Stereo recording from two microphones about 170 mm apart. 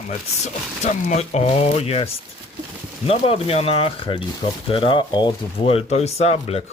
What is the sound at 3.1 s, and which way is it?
Speech, 35° left (ahead or behind).